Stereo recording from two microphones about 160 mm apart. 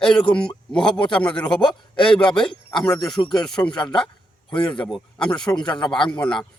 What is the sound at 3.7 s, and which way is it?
Speech, 30° left (ahead or behind).